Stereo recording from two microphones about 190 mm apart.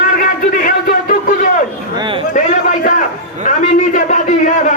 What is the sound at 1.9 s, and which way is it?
Speech, 25° right (ahead or behind).